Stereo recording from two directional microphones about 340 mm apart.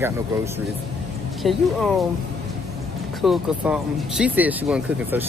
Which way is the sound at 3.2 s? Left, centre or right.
Centre.